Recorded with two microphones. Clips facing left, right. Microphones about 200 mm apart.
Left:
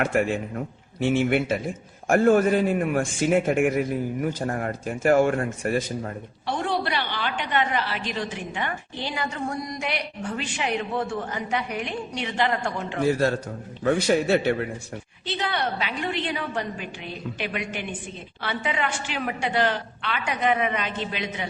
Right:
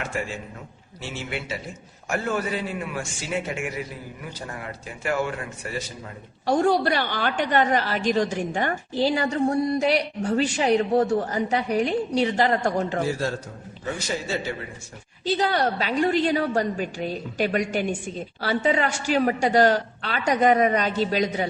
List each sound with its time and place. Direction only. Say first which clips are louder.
0.0 s a man's voice: left 8 dB; 60° left (ahead or behind)
6.4 s a woman's voice: right 7 dB; 40° right (ahead or behind)
13.2 s a man's voice: left 5 dB; 60° left (ahead or behind)
15.4 s a woman's voice: right 3 dB; 40° right (ahead or behind)